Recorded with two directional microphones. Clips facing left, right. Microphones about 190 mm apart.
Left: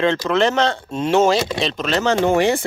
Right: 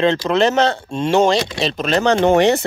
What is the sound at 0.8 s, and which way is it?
Speech, 5° left (ahead or behind).